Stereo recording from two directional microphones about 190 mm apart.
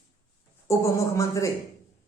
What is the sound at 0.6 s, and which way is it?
Speech, 15° left (ahead or behind).